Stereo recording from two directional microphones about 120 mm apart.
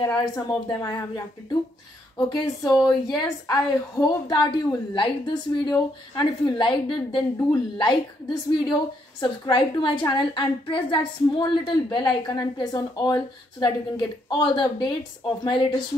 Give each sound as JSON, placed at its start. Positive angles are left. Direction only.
{"t": 0.0, "sound": "a woman's voice", "side_deg": 35}
{"t": 9.2, "sound": "a woman's voice", "side_deg": 40}